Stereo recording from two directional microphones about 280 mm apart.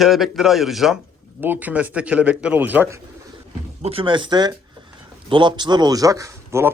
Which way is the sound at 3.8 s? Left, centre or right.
Right.